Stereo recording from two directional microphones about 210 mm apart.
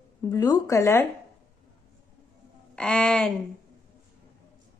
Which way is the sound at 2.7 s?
5° left (ahead or behind).